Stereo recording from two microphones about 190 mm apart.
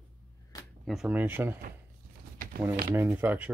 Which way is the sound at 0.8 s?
5° right (ahead or behind).